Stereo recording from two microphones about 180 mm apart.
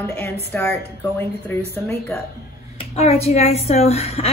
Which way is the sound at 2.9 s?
35° left (ahead or behind).